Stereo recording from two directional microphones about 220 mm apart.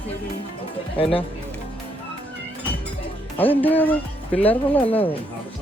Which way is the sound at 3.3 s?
10° left (ahead or behind).